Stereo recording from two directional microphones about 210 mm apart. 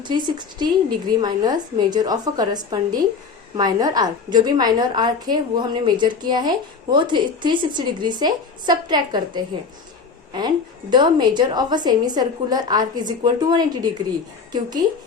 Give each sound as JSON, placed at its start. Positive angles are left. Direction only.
{"t": 0.0, "sound": "a woman's voice", "side_deg": -20}